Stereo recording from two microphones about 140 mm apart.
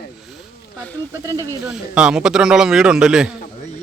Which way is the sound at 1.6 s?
5° right (ahead or behind).